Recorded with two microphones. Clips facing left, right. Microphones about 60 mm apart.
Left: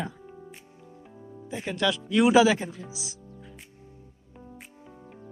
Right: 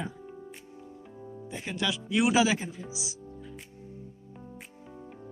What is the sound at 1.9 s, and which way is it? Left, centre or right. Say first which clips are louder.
Speech: left 5 dB; centre.